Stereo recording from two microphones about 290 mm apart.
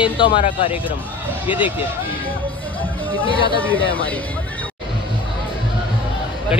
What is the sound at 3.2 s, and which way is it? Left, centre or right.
Speech, centre.